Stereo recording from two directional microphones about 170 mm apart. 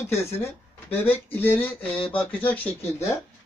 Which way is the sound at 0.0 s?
15° left (ahead or behind).